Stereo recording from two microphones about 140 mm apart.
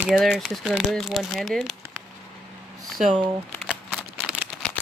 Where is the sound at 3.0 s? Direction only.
55° right (ahead or behind).